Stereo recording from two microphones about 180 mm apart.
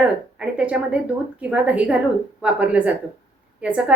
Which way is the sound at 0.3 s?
5° right (ahead or behind).